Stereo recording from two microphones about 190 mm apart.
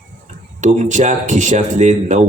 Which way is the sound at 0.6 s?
40° right (ahead or behind).